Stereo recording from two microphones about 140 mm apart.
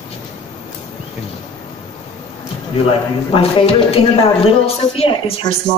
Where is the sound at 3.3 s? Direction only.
45° left (ahead or behind).